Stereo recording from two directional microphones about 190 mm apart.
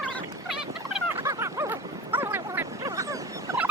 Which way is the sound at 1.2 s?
15° right (ahead or behind).